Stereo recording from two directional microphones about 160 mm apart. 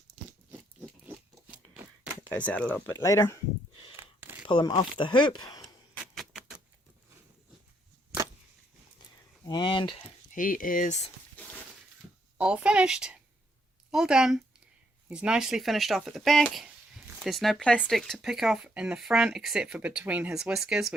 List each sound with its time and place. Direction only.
2.3 s speech: 10° left (ahead or behind)
2.9 s speech: 15° left (ahead or behind)
3.9 s a sound: 15° right (ahead or behind)
4.4 s speech: 30° left (ahead or behind)
9.5 s speech: 30° left (ahead or behind)
10.3 s speech: 60° left (ahead or behind)
11.4 s a sound: 10° left (ahead or behind)
12.4 s speech: 5° right (ahead or behind)